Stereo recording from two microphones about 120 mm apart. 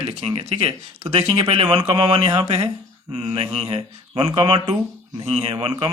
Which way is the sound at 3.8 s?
40° right (ahead or behind).